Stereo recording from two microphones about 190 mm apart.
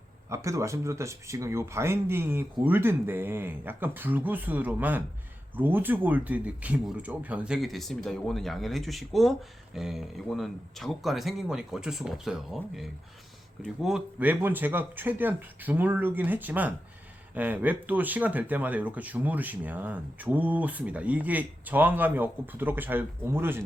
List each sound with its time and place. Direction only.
0.3 s speech: 15° right (ahead or behind)